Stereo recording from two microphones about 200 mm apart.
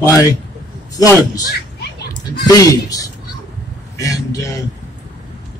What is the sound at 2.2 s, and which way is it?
Speech, 20° left (ahead or behind).